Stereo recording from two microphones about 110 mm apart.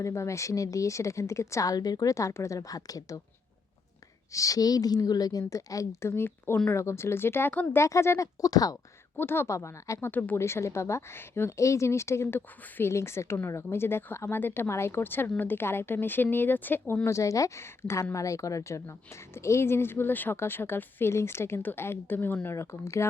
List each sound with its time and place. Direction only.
0.0 s speech: 25° left (ahead or behind)
4.3 s a woman's voice: 30° left (ahead or behind)
7.8 s speech: 25° left (ahead or behind)
9.1 s speech: 20° left (ahead or behind)